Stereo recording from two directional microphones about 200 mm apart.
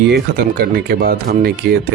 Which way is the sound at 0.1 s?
50° right (ahead or behind).